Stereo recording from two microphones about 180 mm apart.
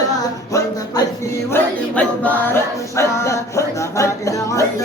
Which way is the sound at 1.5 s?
10° left (ahead or behind).